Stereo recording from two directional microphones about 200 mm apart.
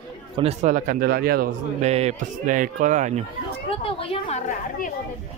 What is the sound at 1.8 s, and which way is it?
Speech, 35° right (ahead or behind).